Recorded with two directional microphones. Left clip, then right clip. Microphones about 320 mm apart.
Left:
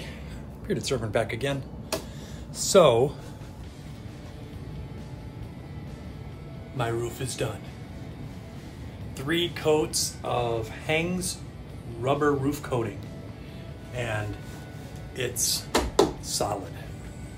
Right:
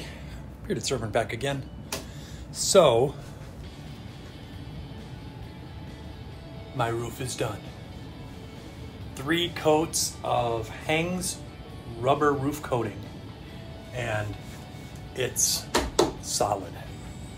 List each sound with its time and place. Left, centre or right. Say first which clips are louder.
0.7 s speech: left 1 dB; centre
6.8 s speech: right 1 dB; centre
9.1 s speech: even; centre
13.9 s speech: right 1 dB; centre